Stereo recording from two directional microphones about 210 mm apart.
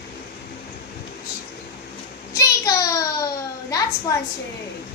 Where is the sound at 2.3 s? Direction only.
15° left (ahead or behind).